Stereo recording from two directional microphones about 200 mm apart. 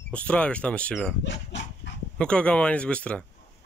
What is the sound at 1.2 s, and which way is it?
Dog, 65° left (ahead or behind).